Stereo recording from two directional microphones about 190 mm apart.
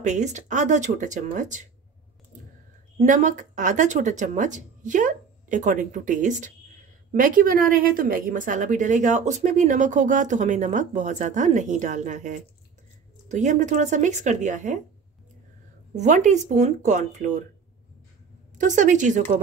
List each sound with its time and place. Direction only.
0.0 s a woman's voice: 40° right (ahead or behind)
3.0 s a woman's voice: 40° right (ahead or behind)
15.9 s a woman's voice: 40° right (ahead or behind)
18.6 s a woman's voice: 40° right (ahead or behind)